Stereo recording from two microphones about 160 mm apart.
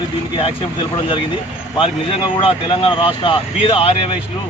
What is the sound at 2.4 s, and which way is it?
Speech, 35° left (ahead or behind).